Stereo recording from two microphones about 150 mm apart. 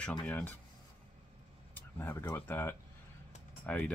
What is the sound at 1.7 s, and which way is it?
Speech, 15° left (ahead or behind).